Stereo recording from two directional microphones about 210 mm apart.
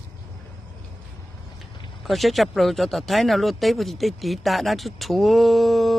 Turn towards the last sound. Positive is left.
turn(degrees=0)  # may be behind; listen again after turning